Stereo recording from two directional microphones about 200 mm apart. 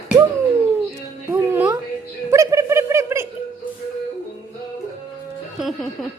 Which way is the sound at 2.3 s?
15° right (ahead or behind).